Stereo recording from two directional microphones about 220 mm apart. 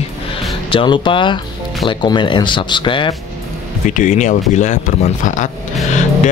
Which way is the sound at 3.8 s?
35° left (ahead or behind).